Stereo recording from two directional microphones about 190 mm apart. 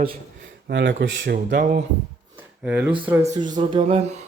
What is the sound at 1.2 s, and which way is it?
Speech, 50° right (ahead or behind).